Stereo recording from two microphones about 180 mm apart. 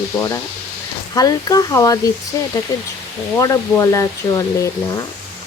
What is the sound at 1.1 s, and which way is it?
Speech, 20° left (ahead or behind).